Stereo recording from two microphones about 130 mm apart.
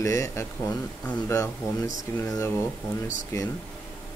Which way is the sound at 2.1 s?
25° left (ahead or behind).